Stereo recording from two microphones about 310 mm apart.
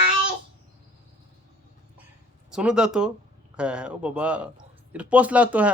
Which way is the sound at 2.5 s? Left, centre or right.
Centre.